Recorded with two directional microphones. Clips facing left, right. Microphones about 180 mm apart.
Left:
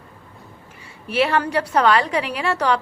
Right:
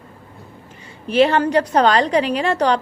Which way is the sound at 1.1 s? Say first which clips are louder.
Right 5 dB; 30° right (ahead or behind).